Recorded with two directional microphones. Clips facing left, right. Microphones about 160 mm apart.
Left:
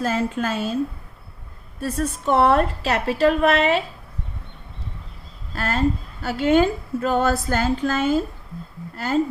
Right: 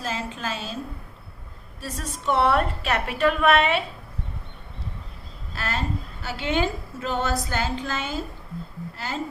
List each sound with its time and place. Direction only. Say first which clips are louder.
0.0 s a woman's voice: left 8 dB; 50° left (ahead or behind)
1.8 s a woman's voice: left 8 dB; 50° left (ahead or behind)
5.5 s a woman's voice: left 7 dB; 50° left (ahead or behind)